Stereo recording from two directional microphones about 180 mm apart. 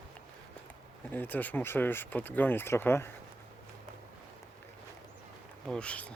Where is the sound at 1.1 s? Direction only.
10° left (ahead or behind).